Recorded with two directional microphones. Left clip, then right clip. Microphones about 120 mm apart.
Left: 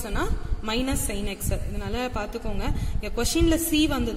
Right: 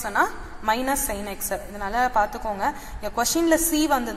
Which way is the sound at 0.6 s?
15° left (ahead or behind).